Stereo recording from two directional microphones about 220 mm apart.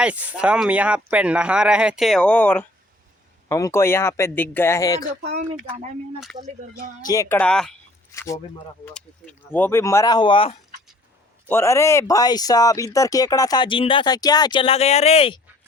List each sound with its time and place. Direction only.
0.0 s speech: 5° right (ahead or behind); by 5.0 s 15° left (ahead or behind)
5.2 s speech: 30° right (ahead or behind)
7.0 s speech: 15° left (ahead or behind)
8.1 s speech: 15° left (ahead or behind)
11.4 s speech: 10° left (ahead or behind); by 15.4 s 25° left (ahead or behind)